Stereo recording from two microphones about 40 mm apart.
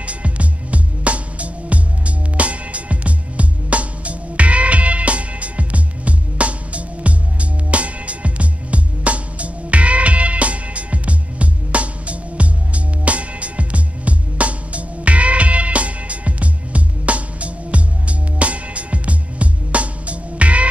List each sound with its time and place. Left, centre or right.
0.0 s music: right